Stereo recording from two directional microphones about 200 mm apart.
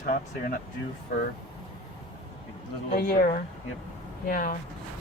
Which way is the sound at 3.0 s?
45° left (ahead or behind).